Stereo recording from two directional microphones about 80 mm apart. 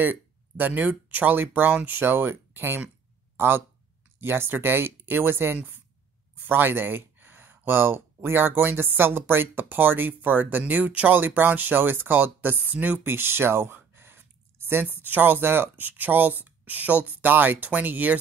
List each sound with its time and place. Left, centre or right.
0.0 s speech: right